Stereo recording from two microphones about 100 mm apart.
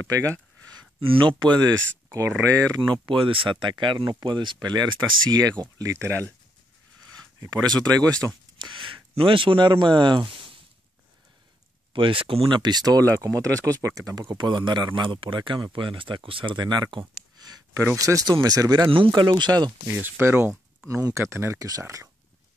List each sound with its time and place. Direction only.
0.0 s a sound: 35° right (ahead or behind)
1.0 s speech: 55° right (ahead or behind)
2.0 s a sound: 30° right (ahead or behind)
2.9 s speech: 55° right (ahead or behind)
5.8 s speech: 30° right (ahead or behind)
7.3 s speech: 35° right (ahead or behind)
8.5 s speech: 55° right (ahead or behind)
11.9 s speech: 60° right (ahead or behind); by 14.2 s 35° right (ahead or behind)
14.3 s speech: 50° right (ahead or behind)
17.4 s a sound: 40° right (ahead or behind)
17.9 s speech: 35° right (ahead or behind)
18.9 s speech: 55° right (ahead or behind)
19.9 s speech: 25° right (ahead or behind)